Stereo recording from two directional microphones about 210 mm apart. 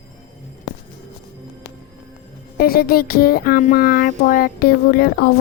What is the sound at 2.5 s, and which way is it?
A woman's voice, 45° left (ahead or behind).